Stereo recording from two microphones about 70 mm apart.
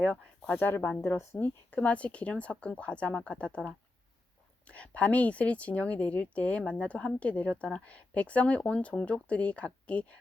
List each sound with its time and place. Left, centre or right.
0.0 s speech: centre
0.5 s speech: left
1.7 s speech: left